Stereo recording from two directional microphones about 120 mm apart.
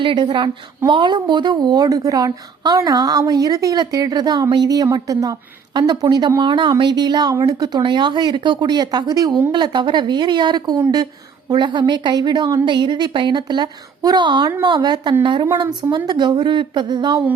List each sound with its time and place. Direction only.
0.0 s a woman's voice: 40° right (ahead or behind)